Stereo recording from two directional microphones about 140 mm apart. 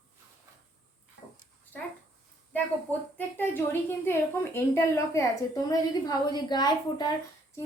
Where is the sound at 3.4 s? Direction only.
15° left (ahead or behind); by 7.1 s 30° left (ahead or behind).